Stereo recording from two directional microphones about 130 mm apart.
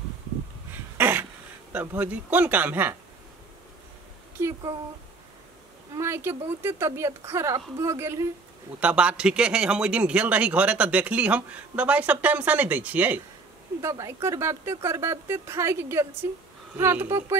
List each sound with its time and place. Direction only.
0.9 s throat clearing: 15° right (ahead or behind)
1.7 s speech: 15° right (ahead or behind)
4.4 s speech: 20° right (ahead or behind)
5.9 s speech: 20° right (ahead or behind)
8.7 s speech: 10° right (ahead or behind)
13.7 s speech: 25° right (ahead or behind)